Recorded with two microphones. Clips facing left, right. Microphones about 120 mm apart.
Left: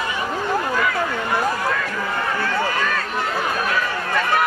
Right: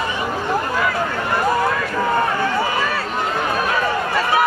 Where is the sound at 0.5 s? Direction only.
10° right (ahead or behind).